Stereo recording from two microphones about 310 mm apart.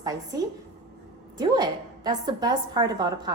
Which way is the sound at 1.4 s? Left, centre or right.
Centre.